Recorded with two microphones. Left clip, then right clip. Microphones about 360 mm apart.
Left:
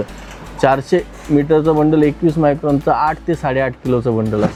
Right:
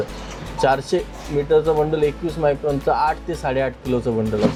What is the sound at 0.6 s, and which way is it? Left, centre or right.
Speech, left.